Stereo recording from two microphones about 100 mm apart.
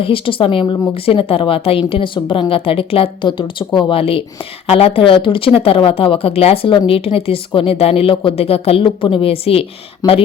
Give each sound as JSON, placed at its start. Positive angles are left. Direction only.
{"t": 0.0, "sound": "speech", "side_deg": 65}
{"t": 1.0, "sound": "speech", "side_deg": 70}
{"t": 10.0, "sound": "speech", "side_deg": 35}